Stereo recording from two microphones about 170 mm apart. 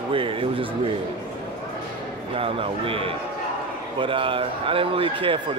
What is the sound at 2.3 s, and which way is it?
A man's voice, 30° right (ahead or behind).